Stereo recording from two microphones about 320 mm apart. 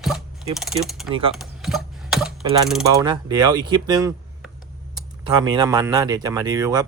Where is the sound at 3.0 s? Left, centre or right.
Centre.